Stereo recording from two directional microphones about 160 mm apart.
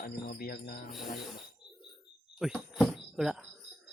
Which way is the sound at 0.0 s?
70° left (ahead or behind).